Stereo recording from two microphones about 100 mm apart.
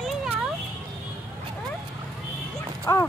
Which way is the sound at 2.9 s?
35° left (ahead or behind).